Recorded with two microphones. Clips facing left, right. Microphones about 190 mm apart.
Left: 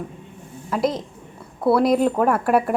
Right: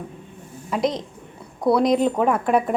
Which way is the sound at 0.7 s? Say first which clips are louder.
Left 1 dB; 5° left (ahead or behind).